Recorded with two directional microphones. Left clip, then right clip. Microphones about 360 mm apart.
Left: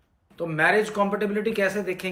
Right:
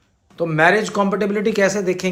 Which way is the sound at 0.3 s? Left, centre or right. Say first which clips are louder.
Right 6 dB; centre.